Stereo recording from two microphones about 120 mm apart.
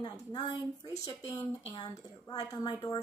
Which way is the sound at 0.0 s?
35° left (ahead or behind).